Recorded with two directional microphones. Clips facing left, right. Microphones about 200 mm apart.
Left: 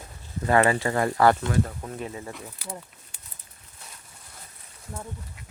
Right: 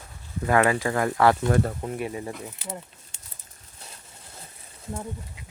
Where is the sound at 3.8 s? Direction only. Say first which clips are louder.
Right 2 dB; 30° right (ahead or behind).